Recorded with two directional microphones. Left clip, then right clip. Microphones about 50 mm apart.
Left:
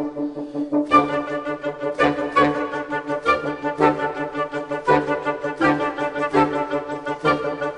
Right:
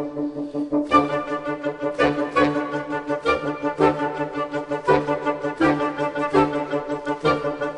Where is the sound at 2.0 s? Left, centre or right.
Centre.